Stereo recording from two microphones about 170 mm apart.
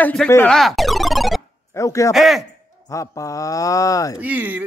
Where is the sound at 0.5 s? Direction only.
Centre (ahead or behind).